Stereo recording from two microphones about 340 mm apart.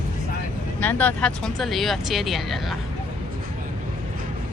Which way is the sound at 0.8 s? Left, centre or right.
Centre.